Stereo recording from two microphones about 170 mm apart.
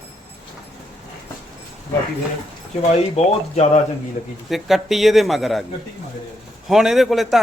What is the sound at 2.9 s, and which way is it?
Speech, 40° left (ahead or behind).